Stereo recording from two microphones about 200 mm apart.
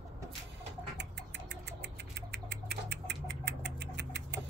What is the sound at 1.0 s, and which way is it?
Engine, 60° right (ahead or behind).